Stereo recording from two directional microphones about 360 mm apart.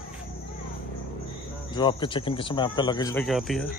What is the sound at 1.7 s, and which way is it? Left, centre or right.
Speech, centre.